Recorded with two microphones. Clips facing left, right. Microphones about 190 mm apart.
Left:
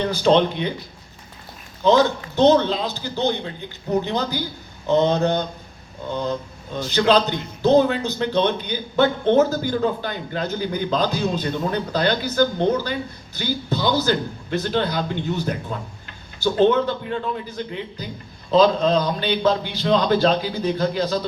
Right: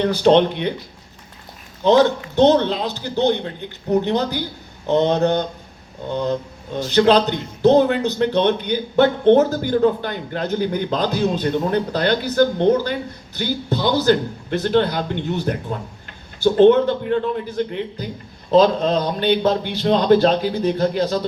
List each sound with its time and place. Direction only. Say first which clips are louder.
0.0 s a man's voice: right 3 dB; 60° right (ahead or behind)
1.8 s a man's voice: right 2 dB; 65° right (ahead or behind)
6.9 s a man's voice: right 3 dB; 65° right (ahead or behind)